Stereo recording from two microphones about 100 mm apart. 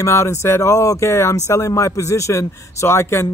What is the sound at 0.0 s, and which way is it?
A man's voice, 30° left (ahead or behind).